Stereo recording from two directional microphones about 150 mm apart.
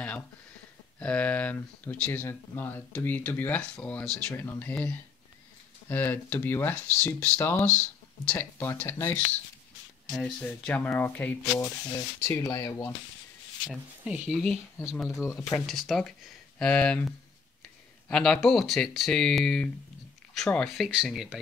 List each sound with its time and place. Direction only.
0.9 s speech: 10° left (ahead or behind)
10.4 s speech: 10° left (ahead or behind)
11.5 s speech: 25° left (ahead or behind)
13.7 s speech: 5° right (ahead or behind)
15.0 s speech: 20° left (ahead or behind)
15.6 s speech: centre (ahead or behind)